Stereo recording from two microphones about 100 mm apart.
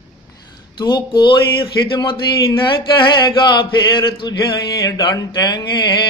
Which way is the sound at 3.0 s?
50° left (ahead or behind).